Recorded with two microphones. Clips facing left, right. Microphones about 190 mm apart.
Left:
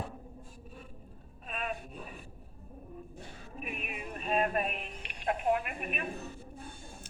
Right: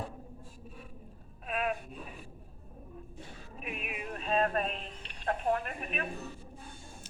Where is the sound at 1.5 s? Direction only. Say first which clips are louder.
Right 5 dB; 5° right (ahead or behind).